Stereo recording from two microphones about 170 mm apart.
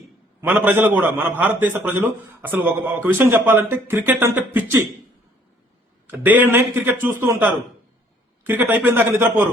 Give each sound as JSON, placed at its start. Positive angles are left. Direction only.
{"t": 0.4, "sound": "a man's voice", "side_deg": -10}
{"t": 6.1, "sound": "a man's voice", "side_deg": -10}